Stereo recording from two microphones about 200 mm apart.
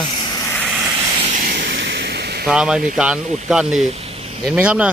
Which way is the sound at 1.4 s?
50° right (ahead or behind).